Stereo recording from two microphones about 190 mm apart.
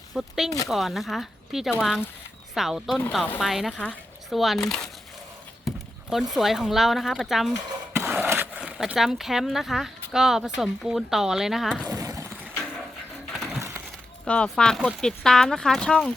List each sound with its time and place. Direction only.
0.1 s speech: centre (ahead or behind)
5.6 s speech: centre (ahead or behind)
11.9 s a sound: 15° right (ahead or behind)
13.3 s crushing: centre (ahead or behind)
14.3 s speech: 5° left (ahead or behind)